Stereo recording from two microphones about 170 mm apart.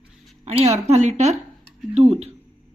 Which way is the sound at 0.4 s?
40° right (ahead or behind).